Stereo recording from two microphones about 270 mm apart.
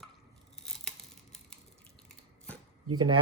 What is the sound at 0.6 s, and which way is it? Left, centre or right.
Tearing, centre.